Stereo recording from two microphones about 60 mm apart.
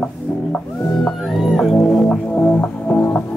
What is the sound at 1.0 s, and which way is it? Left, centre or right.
Music, centre.